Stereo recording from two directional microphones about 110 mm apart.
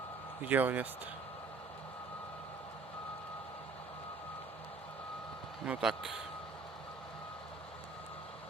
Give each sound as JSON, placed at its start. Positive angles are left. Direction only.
{"t": 0.4, "sound": "speech", "side_deg": -15}
{"t": 5.6, "sound": "a man's voice", "side_deg": -5}